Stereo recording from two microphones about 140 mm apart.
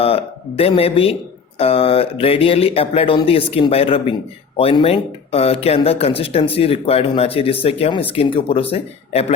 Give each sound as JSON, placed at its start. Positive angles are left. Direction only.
{"t": 0.0, "sound": "a man's voice", "side_deg": 45}